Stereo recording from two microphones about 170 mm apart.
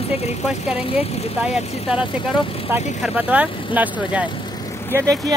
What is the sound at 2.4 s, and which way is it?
Speech, 35° left (ahead or behind).